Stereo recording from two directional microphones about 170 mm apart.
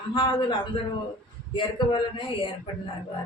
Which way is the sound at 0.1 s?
30° left (ahead or behind).